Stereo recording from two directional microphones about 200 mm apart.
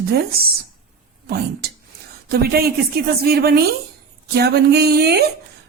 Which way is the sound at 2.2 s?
50° right (ahead or behind).